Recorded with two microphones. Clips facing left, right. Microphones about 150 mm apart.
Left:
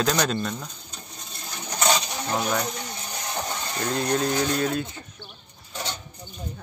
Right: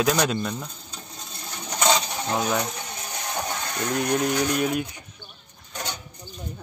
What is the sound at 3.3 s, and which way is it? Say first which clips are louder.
Music: right 1 dB; 5° left (ahead or behind).